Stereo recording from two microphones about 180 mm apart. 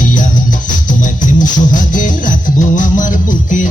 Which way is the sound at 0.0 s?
45° left (ahead or behind).